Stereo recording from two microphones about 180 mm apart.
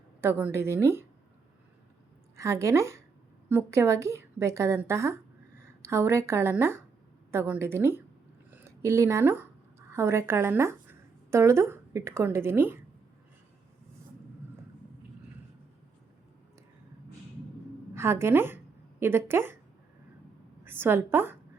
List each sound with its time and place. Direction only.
0.2 s a woman's voice: 10° right (ahead or behind)
2.3 s a woman's voice: 15° right (ahead or behind)
8.4 s a sound: 10° right (ahead or behind)
9.9 s a woman's voice: 15° right (ahead or behind)
17.9 s a woman's voice: 15° right (ahead or behind)
20.7 s a woman's voice: 10° right (ahead or behind)